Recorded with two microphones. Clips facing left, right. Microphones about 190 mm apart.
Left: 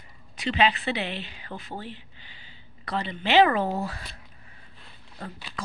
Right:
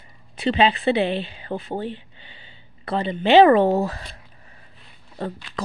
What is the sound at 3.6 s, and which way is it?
Speech, 90° right.